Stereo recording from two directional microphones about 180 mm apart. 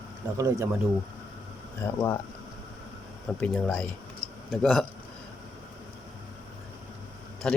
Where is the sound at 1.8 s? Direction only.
10° left (ahead or behind).